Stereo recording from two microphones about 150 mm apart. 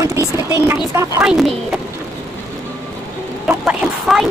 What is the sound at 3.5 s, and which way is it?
Vehicle, 5° right (ahead or behind).